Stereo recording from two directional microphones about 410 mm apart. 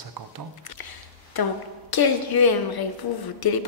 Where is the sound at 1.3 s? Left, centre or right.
Left.